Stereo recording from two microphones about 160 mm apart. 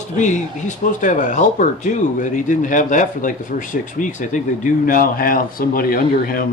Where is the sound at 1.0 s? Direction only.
50° left (ahead or behind).